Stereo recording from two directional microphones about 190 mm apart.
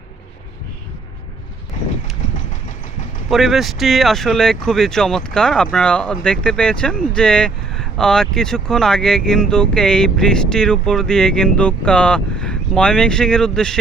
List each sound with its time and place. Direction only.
2.3 s engine: 40° left (ahead or behind)
3.2 s speech: centre (ahead or behind)